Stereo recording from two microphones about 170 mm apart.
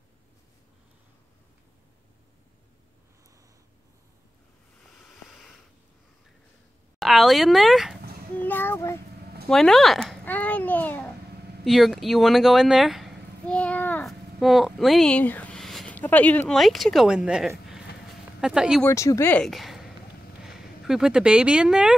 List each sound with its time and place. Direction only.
7.0 s speech: centre (ahead or behind)
8.4 s speech: 10° left (ahead or behind)
9.5 s a child's voice: centre (ahead or behind)
11.6 s a sound: centre (ahead or behind)
14.4 s speech: centre (ahead or behind)
17.6 s a sound: 5° right (ahead or behind)
18.8 s speech: 15° left (ahead or behind)
19.4 s speech: centre (ahead or behind)